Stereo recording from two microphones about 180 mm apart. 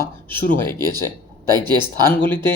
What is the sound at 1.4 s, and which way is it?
Speech, 20° right (ahead or behind).